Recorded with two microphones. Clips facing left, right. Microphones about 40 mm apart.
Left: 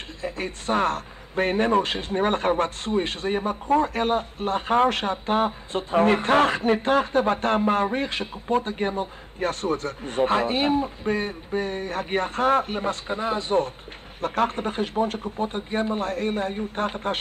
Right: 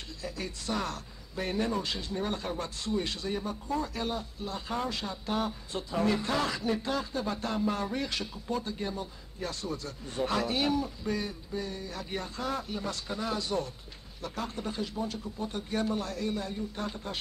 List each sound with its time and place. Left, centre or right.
0.2 s speech: left
14.2 s speech: left